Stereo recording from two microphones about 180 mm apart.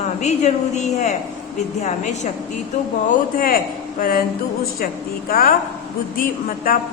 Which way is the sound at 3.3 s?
50° left (ahead or behind).